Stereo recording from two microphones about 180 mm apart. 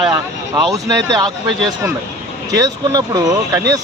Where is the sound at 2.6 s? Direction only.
20° right (ahead or behind).